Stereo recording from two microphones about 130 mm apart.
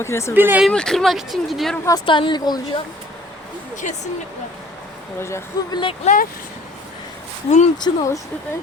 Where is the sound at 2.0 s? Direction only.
40° left (ahead or behind).